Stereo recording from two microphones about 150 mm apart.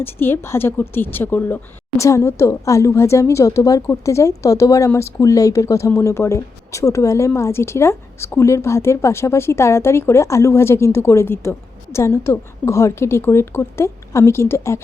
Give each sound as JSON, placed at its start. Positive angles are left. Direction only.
{"t": 0.0, "sound": "a woman's voice", "side_deg": 15}